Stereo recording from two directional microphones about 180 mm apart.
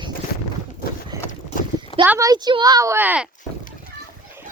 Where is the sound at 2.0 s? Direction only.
15° right (ahead or behind).